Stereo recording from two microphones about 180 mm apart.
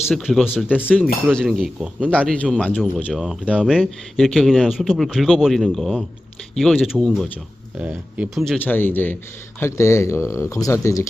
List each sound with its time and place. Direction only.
0.1 s speech: centre (ahead or behind)
8.5 s speech: 10° left (ahead or behind)